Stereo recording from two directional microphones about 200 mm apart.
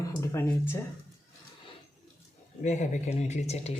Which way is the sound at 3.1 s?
35° left (ahead or behind).